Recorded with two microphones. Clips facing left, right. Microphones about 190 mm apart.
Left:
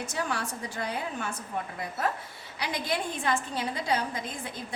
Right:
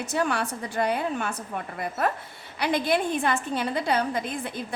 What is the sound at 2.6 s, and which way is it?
A woman's voice, 60° right (ahead or behind).